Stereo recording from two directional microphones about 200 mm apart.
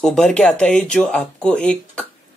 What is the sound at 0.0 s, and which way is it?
Speech, 5° left (ahead or behind).